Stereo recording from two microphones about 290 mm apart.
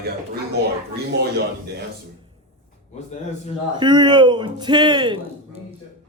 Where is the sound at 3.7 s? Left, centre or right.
Centre.